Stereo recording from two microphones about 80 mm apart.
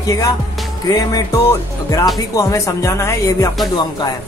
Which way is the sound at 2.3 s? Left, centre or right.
Left.